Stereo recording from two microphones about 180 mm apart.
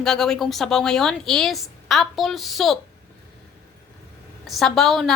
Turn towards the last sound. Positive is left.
turn(degrees=0)  # may be behind; listen again after turning